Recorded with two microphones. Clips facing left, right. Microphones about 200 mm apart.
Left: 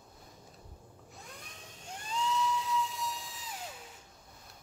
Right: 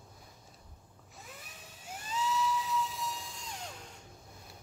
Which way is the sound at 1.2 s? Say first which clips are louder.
Right 1 dB; 5° right (ahead or behind).